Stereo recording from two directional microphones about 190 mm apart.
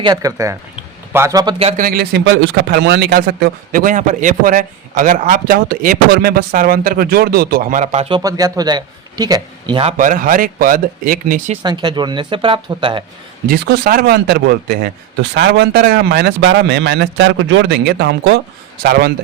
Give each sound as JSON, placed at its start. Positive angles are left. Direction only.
{"t": 0.0, "sound": "speech", "side_deg": -20}
{"t": 1.5, "sound": "speech", "side_deg": -30}
{"t": 1.8, "sound": "speech", "side_deg": -55}
{"t": 8.2, "sound": "a man's voice", "side_deg": -20}
{"t": 10.0, "sound": "speech", "side_deg": -45}
{"t": 11.6, "sound": "a man's voice", "side_deg": -25}
{"t": 13.5, "sound": "a man's voice", "side_deg": -55}
{"t": 15.4, "sound": "a man's voice", "side_deg": -65}